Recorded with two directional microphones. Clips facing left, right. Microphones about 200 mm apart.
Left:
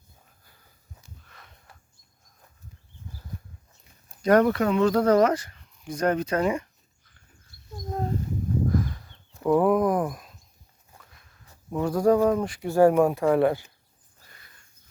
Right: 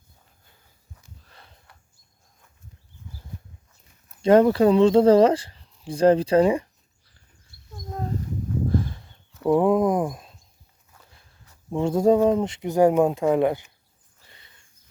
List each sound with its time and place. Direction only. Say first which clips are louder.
1.2 s sniff: right 1 dB; 30° right (ahead or behind)
4.2 s speech: right 4 dB; 25° right (ahead or behind)
8.6 s a sound: right 1 dB; 30° right (ahead or behind)
9.6 s speech: right 1 dB; 25° right (ahead or behind)